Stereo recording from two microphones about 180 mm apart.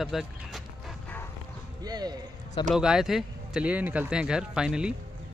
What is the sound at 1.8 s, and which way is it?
Speech, 20° right (ahead or behind).